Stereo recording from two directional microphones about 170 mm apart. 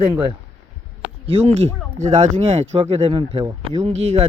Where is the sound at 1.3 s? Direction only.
35° right (ahead or behind).